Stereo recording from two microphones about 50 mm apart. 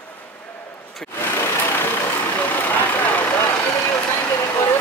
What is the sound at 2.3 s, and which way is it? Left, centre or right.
Vehicle, left.